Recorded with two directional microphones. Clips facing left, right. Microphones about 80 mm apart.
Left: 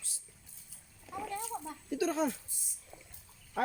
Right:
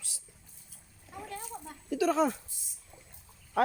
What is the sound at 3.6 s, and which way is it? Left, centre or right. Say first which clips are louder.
Frog: right 6 dB; right.